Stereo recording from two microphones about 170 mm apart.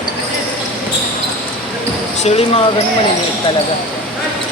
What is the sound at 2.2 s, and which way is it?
Speech, 35° left (ahead or behind).